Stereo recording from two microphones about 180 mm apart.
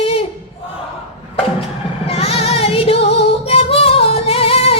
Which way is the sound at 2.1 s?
35° left (ahead or behind).